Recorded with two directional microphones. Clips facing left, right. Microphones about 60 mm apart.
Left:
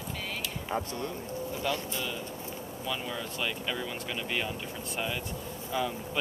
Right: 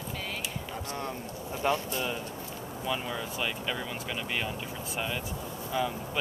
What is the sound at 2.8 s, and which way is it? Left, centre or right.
Speech, centre.